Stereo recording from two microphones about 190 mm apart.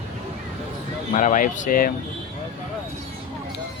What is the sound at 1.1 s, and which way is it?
Speech, 45° left (ahead or behind).